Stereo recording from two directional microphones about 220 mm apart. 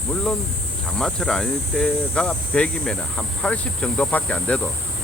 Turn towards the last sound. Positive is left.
turn(degrees=5)  # may be behind; listen again after turning